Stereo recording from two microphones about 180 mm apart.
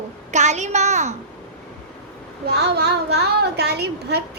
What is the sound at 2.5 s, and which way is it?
A woman's voice, 65° right (ahead or behind).